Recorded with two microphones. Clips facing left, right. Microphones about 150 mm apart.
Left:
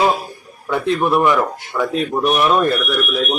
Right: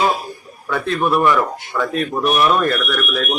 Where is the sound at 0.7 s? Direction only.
20° left (ahead or behind).